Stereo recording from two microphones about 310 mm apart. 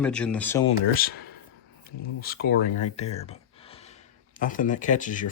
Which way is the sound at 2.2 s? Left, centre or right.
Left.